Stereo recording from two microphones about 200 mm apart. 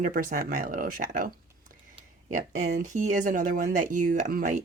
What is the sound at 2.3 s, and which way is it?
Speech, 40° right (ahead or behind).